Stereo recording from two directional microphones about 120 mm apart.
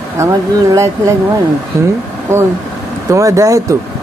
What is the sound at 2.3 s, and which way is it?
A man's voice, 20° right (ahead or behind).